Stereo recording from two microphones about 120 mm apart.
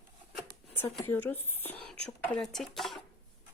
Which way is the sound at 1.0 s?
15° left (ahead or behind).